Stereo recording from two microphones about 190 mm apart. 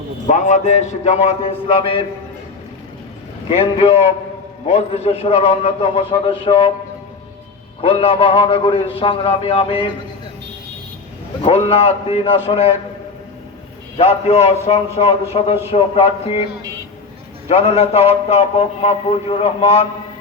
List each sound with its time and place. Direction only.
0.3 s a man's voice: 40° left (ahead or behind)
3.5 s a man's voice: 30° left (ahead or behind)
7.8 s a man's voice: 30° left (ahead or behind)
11.4 s a man's voice: 30° left (ahead or behind)
13.9 s a man's voice: 30° left (ahead or behind)
17.5 s a man's voice: 35° left (ahead or behind)